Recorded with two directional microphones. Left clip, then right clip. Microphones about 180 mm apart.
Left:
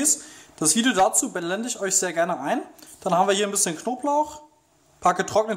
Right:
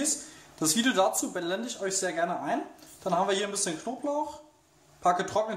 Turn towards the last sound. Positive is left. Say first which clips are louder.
# left 5 dB
turn(degrees=45)  # may be behind; listen again after turning